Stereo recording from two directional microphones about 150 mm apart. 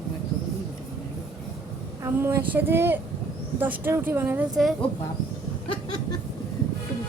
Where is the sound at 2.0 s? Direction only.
15° right (ahead or behind).